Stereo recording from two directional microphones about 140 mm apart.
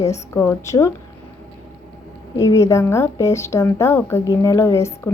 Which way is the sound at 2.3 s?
25° left (ahead or behind).